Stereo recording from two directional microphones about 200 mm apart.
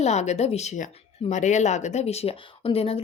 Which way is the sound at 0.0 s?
35° left (ahead or behind).